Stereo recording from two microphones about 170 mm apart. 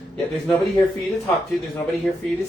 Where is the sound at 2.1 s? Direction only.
5° left (ahead or behind).